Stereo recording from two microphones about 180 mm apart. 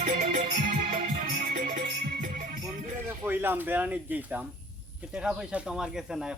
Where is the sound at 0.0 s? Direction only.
45° right (ahead or behind).